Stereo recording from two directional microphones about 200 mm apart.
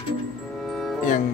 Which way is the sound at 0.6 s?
Centre (ahead or behind).